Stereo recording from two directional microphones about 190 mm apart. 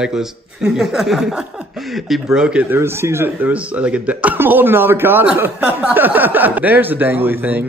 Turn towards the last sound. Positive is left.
turn(degrees=-10)  # may be behind; listen again after turning